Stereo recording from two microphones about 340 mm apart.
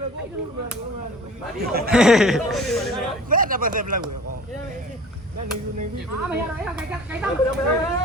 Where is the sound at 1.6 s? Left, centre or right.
Right.